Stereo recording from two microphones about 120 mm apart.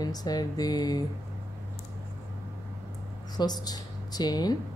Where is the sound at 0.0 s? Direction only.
35° left (ahead or behind).